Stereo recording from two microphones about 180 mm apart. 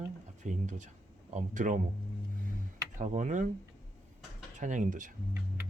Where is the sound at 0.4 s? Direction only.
45° right (ahead or behind).